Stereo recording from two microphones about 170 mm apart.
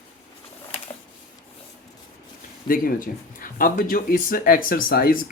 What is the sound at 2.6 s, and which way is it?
Speech, 55° left (ahead or behind).